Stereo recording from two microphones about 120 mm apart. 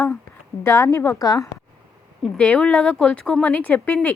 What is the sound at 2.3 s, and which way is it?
Speech, 10° left (ahead or behind).